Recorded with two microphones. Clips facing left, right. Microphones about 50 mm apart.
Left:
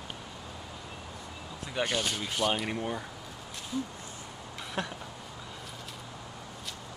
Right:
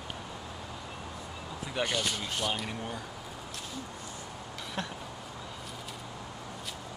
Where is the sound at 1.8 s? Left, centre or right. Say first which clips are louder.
Left 1 dB; centre.